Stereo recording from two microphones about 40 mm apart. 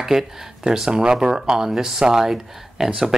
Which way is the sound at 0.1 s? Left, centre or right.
Centre.